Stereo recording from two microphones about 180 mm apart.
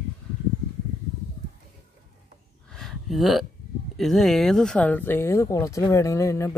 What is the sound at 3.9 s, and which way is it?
Speech, centre (ahead or behind).